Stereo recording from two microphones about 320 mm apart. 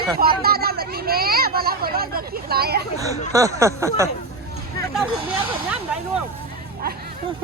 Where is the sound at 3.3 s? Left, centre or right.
Centre.